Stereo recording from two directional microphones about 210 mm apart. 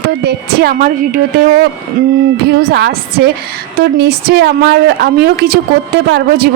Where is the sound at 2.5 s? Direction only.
50° right (ahead or behind).